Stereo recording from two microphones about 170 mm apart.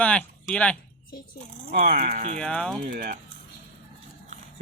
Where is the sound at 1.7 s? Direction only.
60° right (ahead or behind).